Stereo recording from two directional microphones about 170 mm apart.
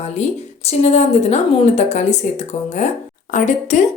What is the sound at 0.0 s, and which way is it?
A woman's voice, 40° left (ahead or behind).